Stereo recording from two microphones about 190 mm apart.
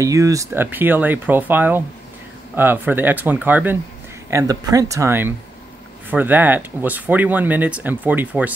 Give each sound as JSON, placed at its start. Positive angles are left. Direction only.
{"t": 0.0, "sound": "speech", "side_deg": -15}